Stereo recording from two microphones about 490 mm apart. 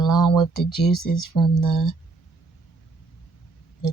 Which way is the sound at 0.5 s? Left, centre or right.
Left.